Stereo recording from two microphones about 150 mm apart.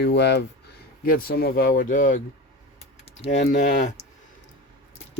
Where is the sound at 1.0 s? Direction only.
85° left; by 2.2 s 60° left (ahead or behind).